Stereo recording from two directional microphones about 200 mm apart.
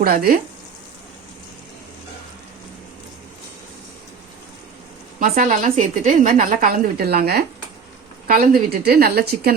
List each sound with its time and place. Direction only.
0.0 s a woman's voice: 50° right (ahead or behind)
5.2 s a woman's voice: 45° right (ahead or behind)